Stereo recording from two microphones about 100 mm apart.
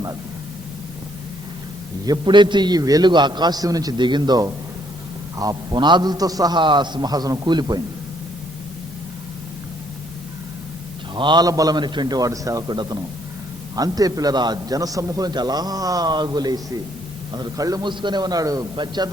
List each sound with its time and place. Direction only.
2.0 s a man's voice: 50° right (ahead or behind)
11.1 s a man's voice: 50° right (ahead or behind)
11.4 s a man's voice: 40° right (ahead or behind)
17.8 s a man's voice: 50° right (ahead or behind)